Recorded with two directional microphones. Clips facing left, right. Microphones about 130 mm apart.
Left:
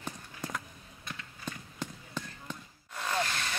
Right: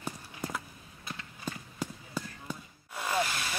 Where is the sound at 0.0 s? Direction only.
5° right (ahead or behind).